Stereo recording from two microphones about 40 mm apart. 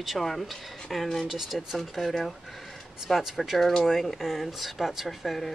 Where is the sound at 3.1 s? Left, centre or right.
Centre.